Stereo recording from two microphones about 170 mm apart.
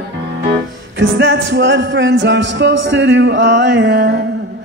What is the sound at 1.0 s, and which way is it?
Music, 90° right.